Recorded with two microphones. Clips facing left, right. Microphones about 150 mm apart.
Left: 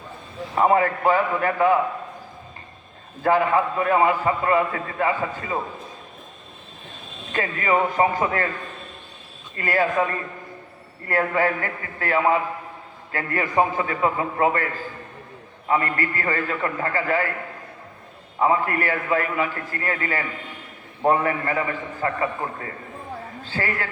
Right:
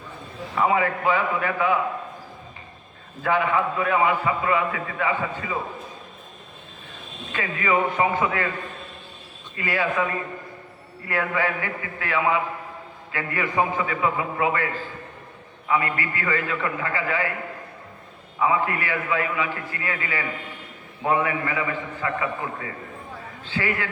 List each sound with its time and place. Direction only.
0.5 s a man's voice: 40° left (ahead or behind)
3.2 s a man's voice: 40° left (ahead or behind)
7.3 s a man's voice: 40° left (ahead or behind)
9.6 s a man's voice: 45° left (ahead or behind)
18.3 s a man's voice: 45° left (ahead or behind)